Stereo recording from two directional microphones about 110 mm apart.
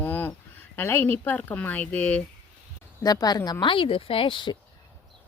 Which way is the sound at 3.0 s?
35° left (ahead or behind).